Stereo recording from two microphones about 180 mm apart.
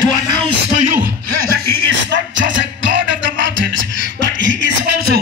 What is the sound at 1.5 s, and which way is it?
Music, 85° right.